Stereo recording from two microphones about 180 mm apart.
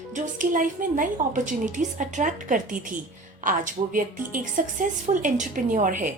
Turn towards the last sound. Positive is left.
turn(degrees=-45)  # may be behind; listen again after turning